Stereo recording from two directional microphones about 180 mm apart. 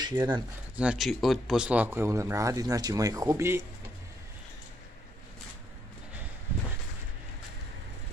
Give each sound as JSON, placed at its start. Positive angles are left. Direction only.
{"t": 0.0, "sound": "speech", "side_deg": -20}
{"t": 0.7, "sound": "speech", "side_deg": -5}